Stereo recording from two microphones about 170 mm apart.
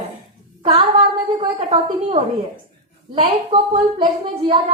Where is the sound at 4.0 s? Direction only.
30° right (ahead or behind).